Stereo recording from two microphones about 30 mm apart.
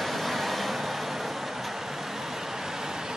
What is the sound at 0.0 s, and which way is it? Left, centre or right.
Vehicle, centre.